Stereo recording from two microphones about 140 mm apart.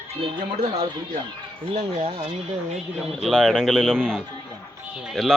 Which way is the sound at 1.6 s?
45° right (ahead or behind).